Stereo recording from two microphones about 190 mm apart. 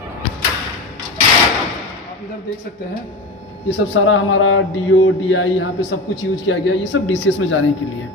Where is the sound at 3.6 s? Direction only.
85° left.